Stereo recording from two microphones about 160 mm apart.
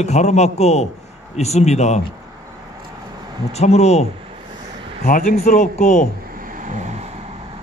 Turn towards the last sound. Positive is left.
turn(degrees=-45)  # may be behind; listen again after turning